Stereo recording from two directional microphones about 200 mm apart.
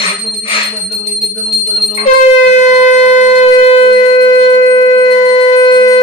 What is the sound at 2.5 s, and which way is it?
Shofar, 35° left (ahead or behind).